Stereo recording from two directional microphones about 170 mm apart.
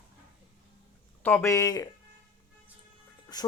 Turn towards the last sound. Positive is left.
turn(degrees=25)  # may be behind; listen again after turning